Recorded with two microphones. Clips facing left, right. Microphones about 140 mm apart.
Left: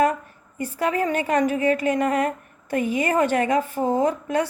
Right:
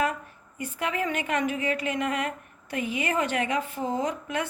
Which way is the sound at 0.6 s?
40° left (ahead or behind).